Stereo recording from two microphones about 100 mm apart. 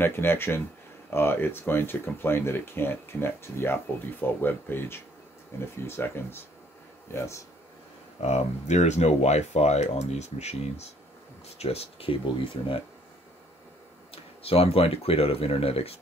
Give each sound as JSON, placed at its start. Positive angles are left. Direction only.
{"t": 0.0, "sound": "speech", "side_deg": 20}
{"t": 8.2, "sound": "speech", "side_deg": 90}
{"t": 14.1, "sound": "speech", "side_deg": 75}